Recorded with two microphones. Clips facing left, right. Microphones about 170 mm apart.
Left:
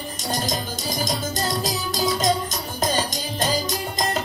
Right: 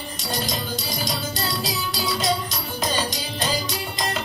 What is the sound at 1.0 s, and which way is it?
Music, 45° left (ahead or behind).